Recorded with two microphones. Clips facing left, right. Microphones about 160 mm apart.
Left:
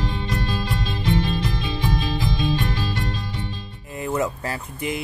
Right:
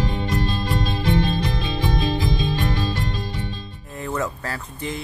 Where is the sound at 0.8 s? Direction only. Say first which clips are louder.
Right 2 dB; 50° right (ahead or behind).